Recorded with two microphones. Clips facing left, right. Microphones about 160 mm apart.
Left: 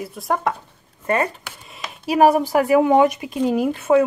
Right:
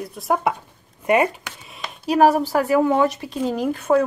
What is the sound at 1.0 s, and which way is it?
Speech, 15° right (ahead or behind).